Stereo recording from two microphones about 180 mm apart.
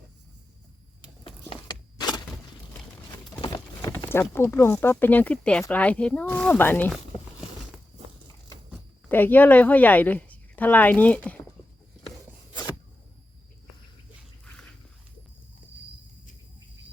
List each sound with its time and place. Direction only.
1.2 s a sound: 25° left (ahead or behind)
3.4 s speech: 20° left (ahead or behind)
9.0 s a woman's voice: 10° left (ahead or behind)